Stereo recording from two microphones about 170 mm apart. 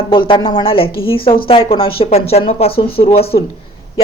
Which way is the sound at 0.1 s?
30° left (ahead or behind).